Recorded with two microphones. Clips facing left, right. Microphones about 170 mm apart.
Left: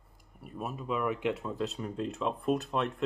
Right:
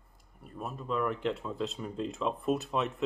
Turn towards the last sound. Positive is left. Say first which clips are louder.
# even
turn(degrees=0)  # may be behind; listen again after turning